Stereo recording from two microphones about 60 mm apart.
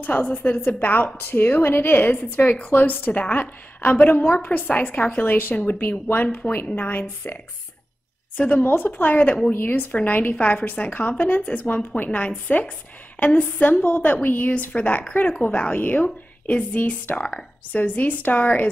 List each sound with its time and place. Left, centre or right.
0.0 s a woman's voice: left
8.4 s a woman's voice: left
8.6 s a woman's voice: left